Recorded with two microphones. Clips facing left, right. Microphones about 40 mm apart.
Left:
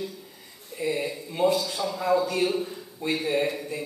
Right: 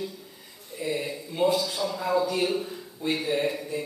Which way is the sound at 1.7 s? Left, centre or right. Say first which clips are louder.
Left 2 dB; centre.